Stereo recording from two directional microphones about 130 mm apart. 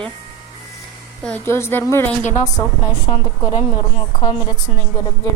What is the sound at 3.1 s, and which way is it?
A woman's voice, 45° left (ahead or behind).